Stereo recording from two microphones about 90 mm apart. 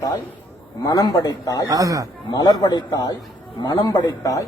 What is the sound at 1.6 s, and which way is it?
Speech, 40° right (ahead or behind).